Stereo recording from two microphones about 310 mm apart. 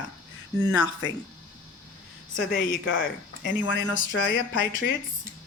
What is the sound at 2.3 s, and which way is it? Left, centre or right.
Speech, left.